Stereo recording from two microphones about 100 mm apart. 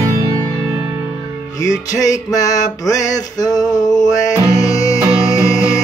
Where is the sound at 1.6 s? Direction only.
35° left (ahead or behind).